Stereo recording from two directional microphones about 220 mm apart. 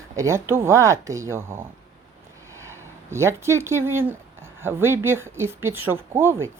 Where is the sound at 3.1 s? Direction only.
10° right (ahead or behind).